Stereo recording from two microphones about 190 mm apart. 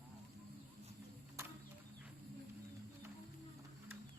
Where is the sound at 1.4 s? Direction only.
15° right (ahead or behind).